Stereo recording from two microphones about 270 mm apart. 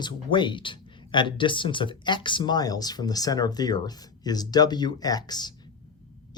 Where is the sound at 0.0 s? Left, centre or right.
Centre.